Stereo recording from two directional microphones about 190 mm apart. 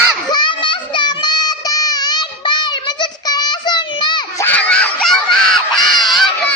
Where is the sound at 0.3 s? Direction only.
25° left (ahead or behind).